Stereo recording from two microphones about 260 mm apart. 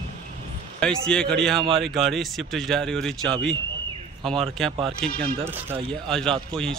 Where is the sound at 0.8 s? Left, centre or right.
Centre.